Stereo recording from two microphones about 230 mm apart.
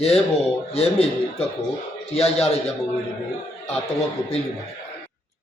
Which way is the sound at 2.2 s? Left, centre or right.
Left.